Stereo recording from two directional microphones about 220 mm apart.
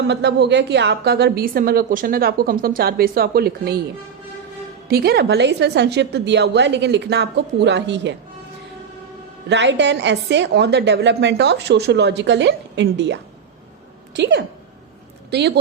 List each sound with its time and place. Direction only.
0.1 s a woman's voice: 50° right (ahead or behind)
4.9 s a woman's voice: 45° right (ahead or behind)
9.5 s a woman's voice: 55° right (ahead or behind)
14.2 s a woman's voice: 55° right (ahead or behind)